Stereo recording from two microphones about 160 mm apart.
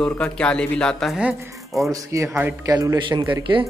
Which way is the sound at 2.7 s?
25° right (ahead or behind).